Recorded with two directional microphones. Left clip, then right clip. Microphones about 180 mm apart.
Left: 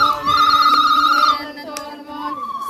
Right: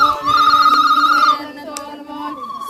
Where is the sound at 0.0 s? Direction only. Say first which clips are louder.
Right 2 dB; 40° right (ahead or behind).